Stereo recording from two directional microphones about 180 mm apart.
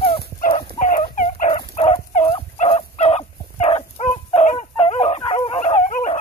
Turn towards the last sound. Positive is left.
turn(degrees=35)  # may be behind; listen again after turning